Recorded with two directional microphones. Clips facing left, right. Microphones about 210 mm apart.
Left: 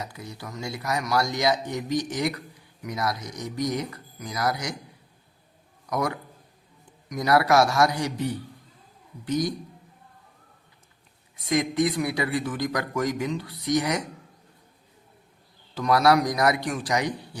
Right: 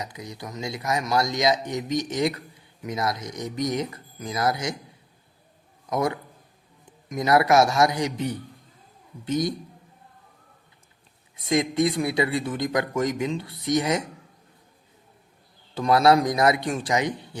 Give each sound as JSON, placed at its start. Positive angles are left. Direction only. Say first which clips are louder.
{"t": 0.0, "sound": "speech", "louder": "right 2 dB", "side_deg": -20}
{"t": 5.8, "sound": "a man's voice", "louder": "right 2 dB", "side_deg": -25}
{"t": 11.4, "sound": "speech", "louder": "right 1 dB", "side_deg": -25}
{"t": 15.7, "sound": "speech", "louder": "right 2 dB", "side_deg": -25}